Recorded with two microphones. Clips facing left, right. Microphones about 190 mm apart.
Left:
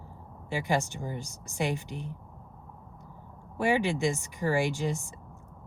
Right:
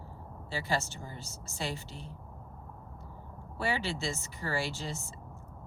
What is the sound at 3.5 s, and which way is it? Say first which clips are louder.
Speech: left 7 dB; 15° left (ahead or behind).